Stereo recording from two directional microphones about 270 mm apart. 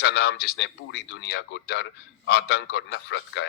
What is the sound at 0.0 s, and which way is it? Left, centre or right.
Speech, left.